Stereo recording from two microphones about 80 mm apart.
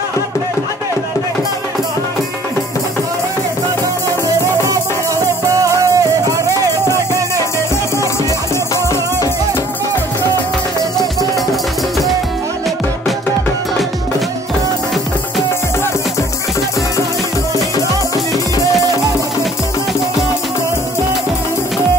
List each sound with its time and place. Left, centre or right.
5.5 s music: right